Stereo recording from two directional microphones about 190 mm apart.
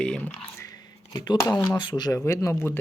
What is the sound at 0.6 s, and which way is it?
Speech, 20° left (ahead or behind).